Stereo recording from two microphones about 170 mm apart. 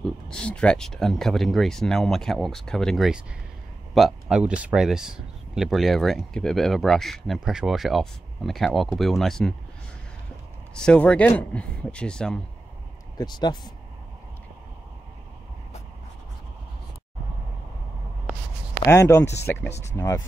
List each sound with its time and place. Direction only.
0.0 s speech: 5° left (ahead or behind)
10.7 s speech: 5° left (ahead or behind)
13.2 s speech: 25° left (ahead or behind)
18.9 s speech: 15° left (ahead or behind)